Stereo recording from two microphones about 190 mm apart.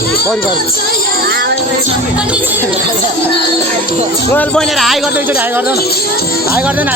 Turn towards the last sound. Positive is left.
turn(degrees=0)  # may be behind; listen again after turning